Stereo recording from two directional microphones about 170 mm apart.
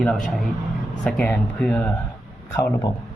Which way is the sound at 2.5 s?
20° left (ahead or behind).